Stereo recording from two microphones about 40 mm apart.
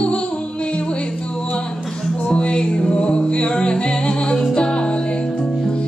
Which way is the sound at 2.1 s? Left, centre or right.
Left.